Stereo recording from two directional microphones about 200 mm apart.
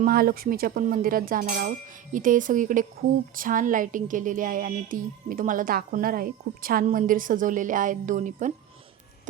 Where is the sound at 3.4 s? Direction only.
45° right (ahead or behind).